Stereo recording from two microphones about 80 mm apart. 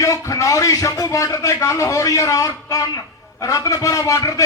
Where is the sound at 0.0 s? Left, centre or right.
Left.